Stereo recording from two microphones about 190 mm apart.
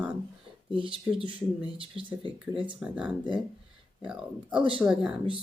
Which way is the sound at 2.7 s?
5° right (ahead or behind).